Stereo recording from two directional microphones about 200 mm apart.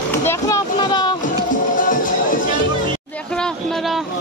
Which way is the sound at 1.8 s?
40° left (ahead or behind).